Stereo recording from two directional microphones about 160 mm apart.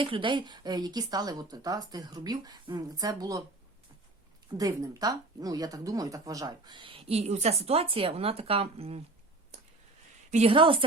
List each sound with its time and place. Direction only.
0.0 s speech: 30° right (ahead or behind)
4.5 s speech: 25° right (ahead or behind); by 9.0 s 40° right (ahead or behind)
10.3 s speech: 35° right (ahead or behind)